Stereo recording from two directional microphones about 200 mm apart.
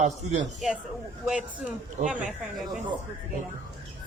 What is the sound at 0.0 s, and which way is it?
Speech, 35° right (ahead or behind).